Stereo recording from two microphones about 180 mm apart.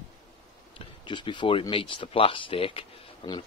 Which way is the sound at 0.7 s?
25° left (ahead or behind).